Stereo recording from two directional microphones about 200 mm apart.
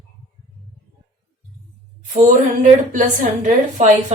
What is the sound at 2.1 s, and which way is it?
A woman's voice, 40° right (ahead or behind).